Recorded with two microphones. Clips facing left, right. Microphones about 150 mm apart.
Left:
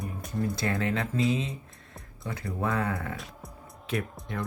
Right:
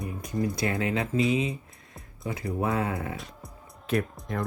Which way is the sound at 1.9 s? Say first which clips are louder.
Right 3 dB; 20° right (ahead or behind).